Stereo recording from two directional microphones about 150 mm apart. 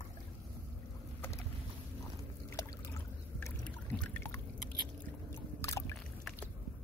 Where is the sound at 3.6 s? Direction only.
10° left (ahead or behind).